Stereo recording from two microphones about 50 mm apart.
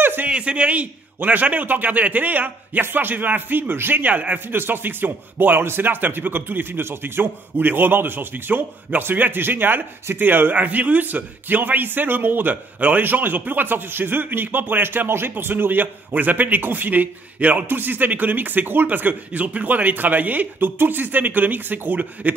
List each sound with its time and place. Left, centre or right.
0.0 s a sound: right
0.3 s a man's voice: right
4.0 s a man's voice: right
4.6 s a man's voice: right